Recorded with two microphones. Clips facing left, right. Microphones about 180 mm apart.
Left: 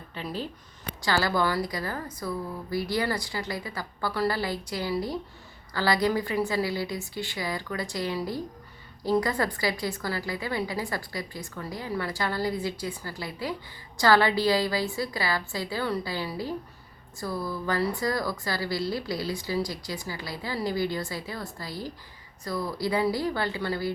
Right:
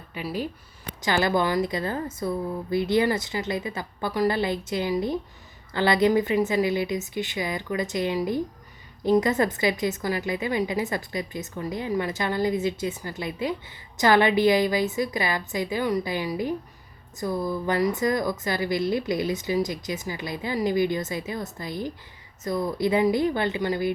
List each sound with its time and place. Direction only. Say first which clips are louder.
0.1 s a woman's voice: right 4 dB; 10° right (ahead or behind)